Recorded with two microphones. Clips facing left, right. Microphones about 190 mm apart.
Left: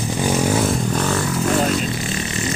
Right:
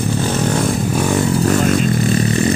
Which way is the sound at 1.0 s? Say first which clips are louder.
Right 5 dB; 15° right (ahead or behind).